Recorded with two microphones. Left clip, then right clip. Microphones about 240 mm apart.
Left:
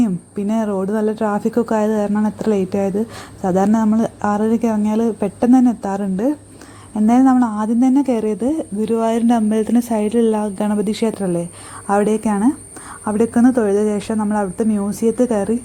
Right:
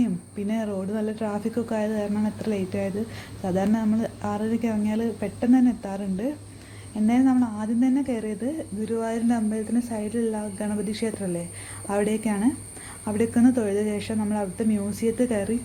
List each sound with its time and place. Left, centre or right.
0.0 s a woman's voice: left